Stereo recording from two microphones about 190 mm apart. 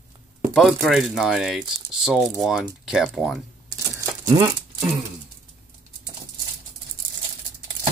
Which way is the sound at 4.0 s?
15° right (ahead or behind).